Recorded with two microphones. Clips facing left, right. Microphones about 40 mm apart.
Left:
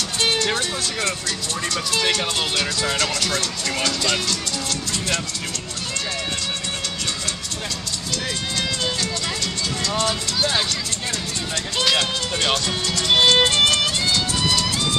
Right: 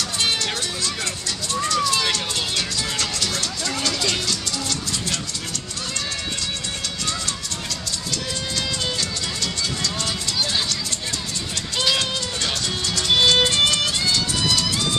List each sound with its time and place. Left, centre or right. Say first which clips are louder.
0.6 s music: left 2 dB; left
1.7 s speech: even; centre
10.0 s music: left 3 dB; centre
11.8 s run: left 2 dB; left
12.6 s music: left 1 dB; centre